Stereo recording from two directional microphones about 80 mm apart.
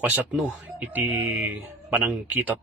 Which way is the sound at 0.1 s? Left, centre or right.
Centre.